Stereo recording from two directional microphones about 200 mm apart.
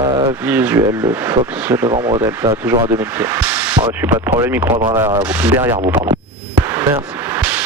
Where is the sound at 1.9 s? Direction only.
25° right (ahead or behind).